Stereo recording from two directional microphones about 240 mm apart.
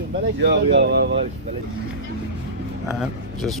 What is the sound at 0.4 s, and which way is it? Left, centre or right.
Speech, right.